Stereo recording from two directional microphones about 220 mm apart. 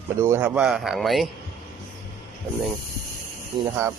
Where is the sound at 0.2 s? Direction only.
10° right (ahead or behind).